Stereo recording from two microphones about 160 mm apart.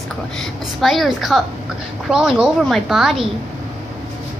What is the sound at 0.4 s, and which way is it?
A woman's voice, centre (ahead or behind).